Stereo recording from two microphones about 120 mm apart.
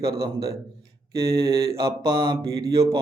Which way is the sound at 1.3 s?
30° right (ahead or behind).